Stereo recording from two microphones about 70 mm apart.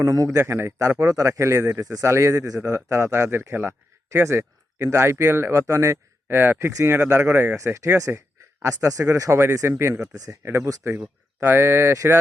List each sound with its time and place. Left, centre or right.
0.0 s speech: right
0.4 s speech: right
6.2 s speech: right
7.5 s speech: right
9.4 s speech: right